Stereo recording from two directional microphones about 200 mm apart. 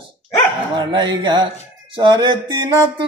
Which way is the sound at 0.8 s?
20° right (ahead or behind).